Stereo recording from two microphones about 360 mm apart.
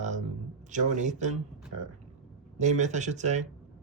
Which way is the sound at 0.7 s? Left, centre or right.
Centre.